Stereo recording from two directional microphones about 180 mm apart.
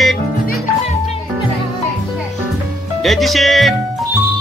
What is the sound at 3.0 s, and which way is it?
Speech, centre (ahead or behind).